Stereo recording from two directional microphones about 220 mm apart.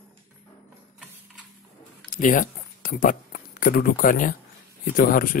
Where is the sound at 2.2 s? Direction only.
40° left (ahead or behind).